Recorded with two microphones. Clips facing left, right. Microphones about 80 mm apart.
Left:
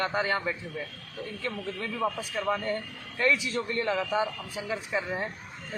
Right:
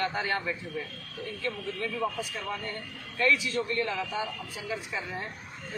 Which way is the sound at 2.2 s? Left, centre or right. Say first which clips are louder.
Left 5 dB; left.